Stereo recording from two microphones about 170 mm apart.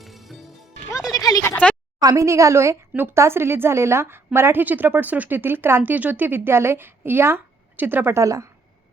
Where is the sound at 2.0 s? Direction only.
20° right (ahead or behind).